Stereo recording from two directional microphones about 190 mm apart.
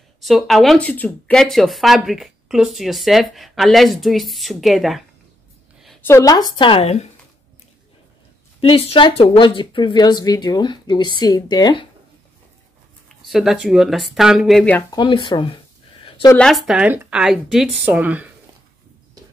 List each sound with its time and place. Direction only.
0.2 s speech: centre (ahead or behind)
6.0 s speech: 15° left (ahead or behind); by 7.1 s 35° left (ahead or behind)
8.5 s speech: 30° left (ahead or behind)
13.3 s speech: centre (ahead or behind)
14.9 s a sound: 25° left (ahead or behind)
16.3 s speech: centre (ahead or behind)